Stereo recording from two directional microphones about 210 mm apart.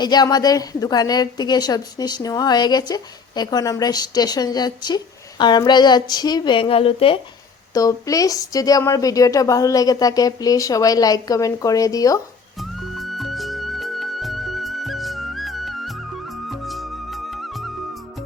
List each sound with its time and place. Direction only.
0.0 s a woman's voice: 20° left (ahead or behind)
12.5 s music: centre (ahead or behind)